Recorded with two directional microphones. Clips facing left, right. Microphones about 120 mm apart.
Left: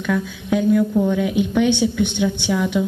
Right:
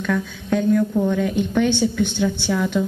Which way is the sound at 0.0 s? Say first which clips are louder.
Left 1 dB; 5° left (ahead or behind).